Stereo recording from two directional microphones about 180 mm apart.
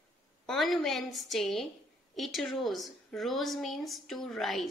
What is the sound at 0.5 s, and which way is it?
A woman's voice, centre (ahead or behind).